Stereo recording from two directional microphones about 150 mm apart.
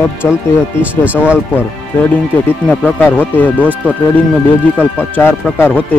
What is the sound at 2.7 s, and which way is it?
Speech, 10° left (ahead or behind).